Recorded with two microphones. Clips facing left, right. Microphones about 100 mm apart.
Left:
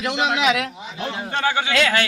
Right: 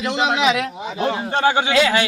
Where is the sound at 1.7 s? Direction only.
5° right (ahead or behind).